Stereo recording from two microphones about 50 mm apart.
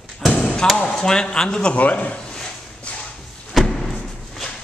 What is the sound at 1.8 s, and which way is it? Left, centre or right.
Speech, left.